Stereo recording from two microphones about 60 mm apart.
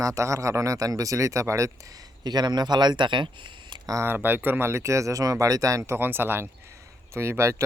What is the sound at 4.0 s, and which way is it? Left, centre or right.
Speech, right.